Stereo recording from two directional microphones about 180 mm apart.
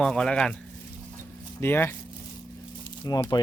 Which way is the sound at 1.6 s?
10° left (ahead or behind).